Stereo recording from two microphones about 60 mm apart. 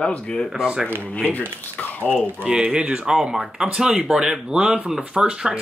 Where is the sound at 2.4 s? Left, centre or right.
Centre.